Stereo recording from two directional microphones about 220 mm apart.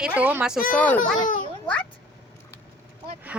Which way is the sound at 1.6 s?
5° left (ahead or behind).